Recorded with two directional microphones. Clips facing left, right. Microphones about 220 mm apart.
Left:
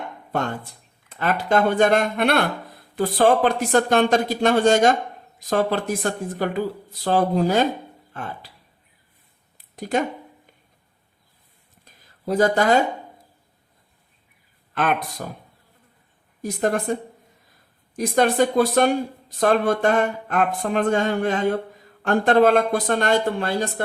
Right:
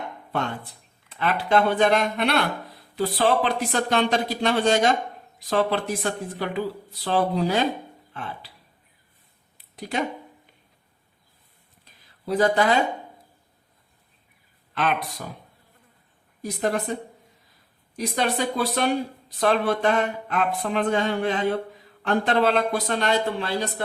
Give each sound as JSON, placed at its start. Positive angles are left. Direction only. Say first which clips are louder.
{"t": 0.3, "sound": "speech", "louder": "left 3 dB", "side_deg": 45}
{"t": 9.7, "sound": "speech", "louder": "left 7 dB", "side_deg": 45}
{"t": 11.9, "sound": "a sound", "louder": "left 2 dB", "side_deg": 45}
{"t": 14.8, "sound": "speech", "louder": "left 3 dB", "side_deg": 50}
{"t": 16.4, "sound": "speech", "louder": "left 3 dB", "side_deg": 45}